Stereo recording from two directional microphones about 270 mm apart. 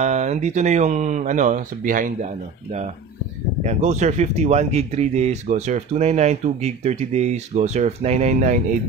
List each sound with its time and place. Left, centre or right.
0.0 s speech: right